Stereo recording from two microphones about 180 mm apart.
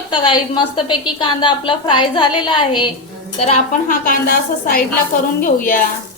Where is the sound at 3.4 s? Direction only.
40° left (ahead or behind).